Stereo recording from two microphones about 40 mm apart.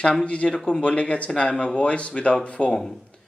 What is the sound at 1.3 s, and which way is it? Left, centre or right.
Speech, left.